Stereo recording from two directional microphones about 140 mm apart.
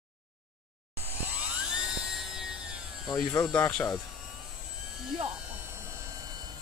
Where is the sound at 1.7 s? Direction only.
5° right (ahead or behind).